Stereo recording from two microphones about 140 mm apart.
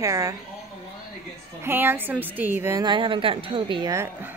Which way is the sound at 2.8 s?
35° right (ahead or behind).